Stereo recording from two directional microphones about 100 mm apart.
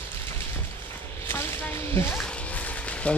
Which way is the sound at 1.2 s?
20° left (ahead or behind).